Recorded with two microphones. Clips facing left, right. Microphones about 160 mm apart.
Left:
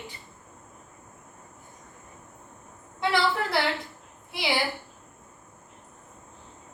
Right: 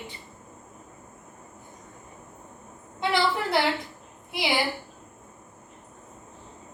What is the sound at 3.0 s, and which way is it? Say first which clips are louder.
Speech: even; 20° right (ahead or behind).